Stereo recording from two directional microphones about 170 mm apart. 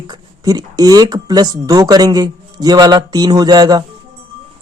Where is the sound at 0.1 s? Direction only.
25° right (ahead or behind).